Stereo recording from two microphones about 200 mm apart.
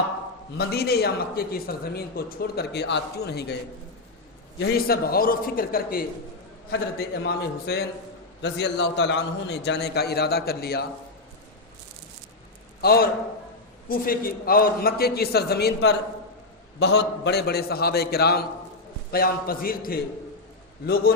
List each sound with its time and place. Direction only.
0.5 s a man's voice: 55° left (ahead or behind)
4.7 s a man's voice: 50° left (ahead or behind)
7.3 s a man's voice: 55° left (ahead or behind)
12.8 s a man's voice: 50° left (ahead or behind)